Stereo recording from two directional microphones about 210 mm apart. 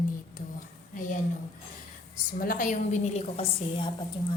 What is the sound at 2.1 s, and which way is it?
A woman's voice, 40° left (ahead or behind).